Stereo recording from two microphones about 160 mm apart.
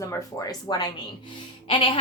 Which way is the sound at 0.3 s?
25° left (ahead or behind).